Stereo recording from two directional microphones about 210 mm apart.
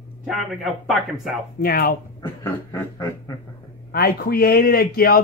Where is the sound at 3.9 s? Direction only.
45° left (ahead or behind).